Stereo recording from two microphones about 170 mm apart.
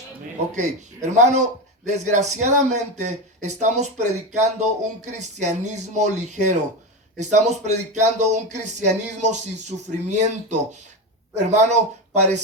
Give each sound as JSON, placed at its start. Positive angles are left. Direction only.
{"t": 0.5, "sound": "speech", "side_deg": -45}